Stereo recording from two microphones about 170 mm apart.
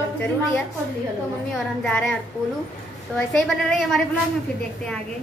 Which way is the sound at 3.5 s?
Centre (ahead or behind).